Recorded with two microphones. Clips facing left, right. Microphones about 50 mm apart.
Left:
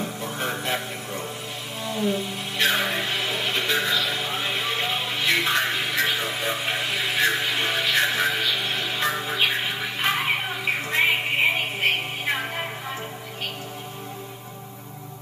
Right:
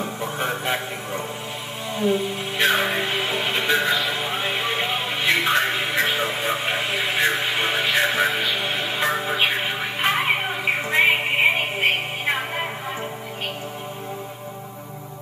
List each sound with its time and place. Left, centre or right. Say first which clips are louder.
0.0 s music: right 3 dB; right